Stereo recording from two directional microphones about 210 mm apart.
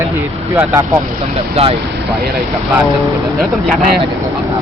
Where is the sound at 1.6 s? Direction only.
30° right (ahead or behind).